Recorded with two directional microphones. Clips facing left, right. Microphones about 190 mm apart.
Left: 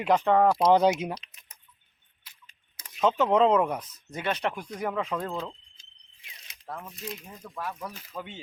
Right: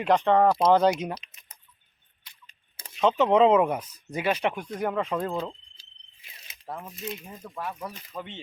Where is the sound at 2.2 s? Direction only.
5° left (ahead or behind).